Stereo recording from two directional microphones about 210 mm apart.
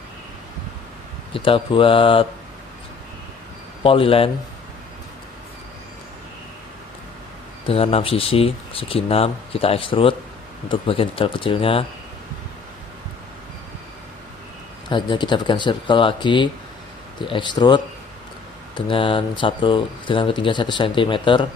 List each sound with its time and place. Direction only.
1.3 s speech: 25° left (ahead or behind)
3.8 s speech: 25° left (ahead or behind)
7.7 s speech: 30° left (ahead or behind)
14.8 s speech: 20° left (ahead or behind)